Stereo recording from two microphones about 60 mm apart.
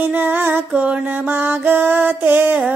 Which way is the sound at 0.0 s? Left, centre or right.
Right.